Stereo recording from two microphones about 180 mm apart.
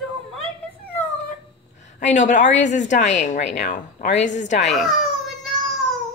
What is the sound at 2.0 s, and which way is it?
A woman's voice, 40° left (ahead or behind).